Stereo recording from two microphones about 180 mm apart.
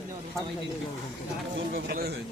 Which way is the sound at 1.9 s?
60° right (ahead or behind).